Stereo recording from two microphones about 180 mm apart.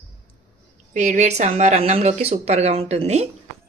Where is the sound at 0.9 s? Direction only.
40° right (ahead or behind).